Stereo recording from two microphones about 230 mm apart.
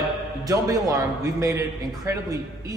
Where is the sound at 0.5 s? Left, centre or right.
Centre.